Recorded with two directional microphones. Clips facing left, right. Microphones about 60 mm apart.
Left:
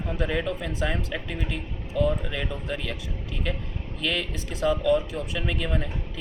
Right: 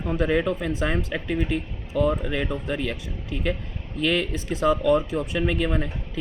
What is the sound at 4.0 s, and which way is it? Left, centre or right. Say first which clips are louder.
Speech: right 5 dB; right.